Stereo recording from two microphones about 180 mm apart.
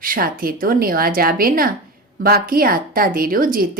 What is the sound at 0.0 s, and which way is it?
Speech, 55° right (ahead or behind).